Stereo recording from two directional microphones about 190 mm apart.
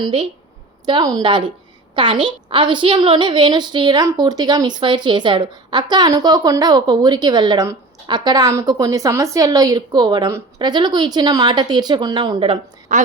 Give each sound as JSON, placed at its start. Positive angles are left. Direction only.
{"t": 0.0, "sound": "a woman's voice", "side_deg": -25}
{"t": 12.9, "sound": "a woman's voice", "side_deg": -40}